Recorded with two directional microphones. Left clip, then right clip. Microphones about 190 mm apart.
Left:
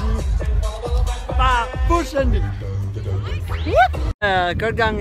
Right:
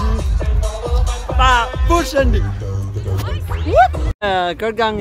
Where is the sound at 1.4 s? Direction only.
10° right (ahead or behind).